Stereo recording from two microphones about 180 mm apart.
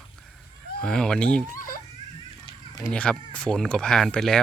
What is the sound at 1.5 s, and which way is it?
Giggle, 50° left (ahead or behind).